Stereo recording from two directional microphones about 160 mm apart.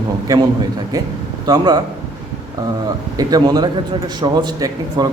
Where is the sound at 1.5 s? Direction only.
25° right (ahead or behind).